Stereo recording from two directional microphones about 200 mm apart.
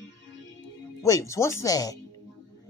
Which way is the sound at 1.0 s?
15° left (ahead or behind).